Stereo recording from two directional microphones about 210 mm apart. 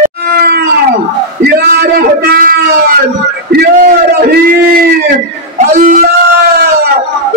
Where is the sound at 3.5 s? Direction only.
50° right (ahead or behind).